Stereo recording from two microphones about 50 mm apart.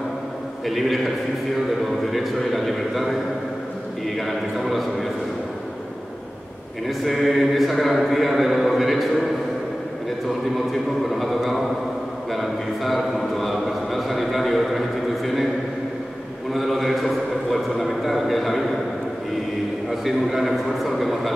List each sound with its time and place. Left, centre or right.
0.7 s a man's voice: centre
4.2 s a man's voice: centre
6.9 s a man's voice: centre
10.5 s a man's voice: centre
16.5 s a man's voice: centre
19.9 s a man's voice: centre